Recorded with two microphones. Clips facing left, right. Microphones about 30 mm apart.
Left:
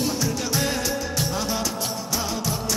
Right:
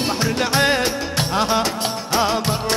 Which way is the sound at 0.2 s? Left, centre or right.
Right.